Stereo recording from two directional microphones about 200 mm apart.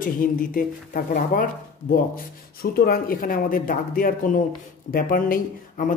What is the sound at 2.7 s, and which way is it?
Speech, 45° left (ahead or behind).